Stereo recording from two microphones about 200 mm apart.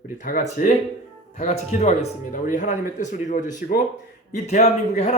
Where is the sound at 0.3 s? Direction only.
45° left (ahead or behind).